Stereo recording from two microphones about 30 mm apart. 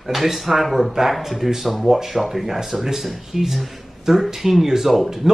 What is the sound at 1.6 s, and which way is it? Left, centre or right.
Speech, centre.